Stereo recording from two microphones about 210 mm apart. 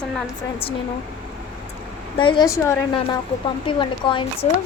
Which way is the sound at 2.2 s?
20° left (ahead or behind).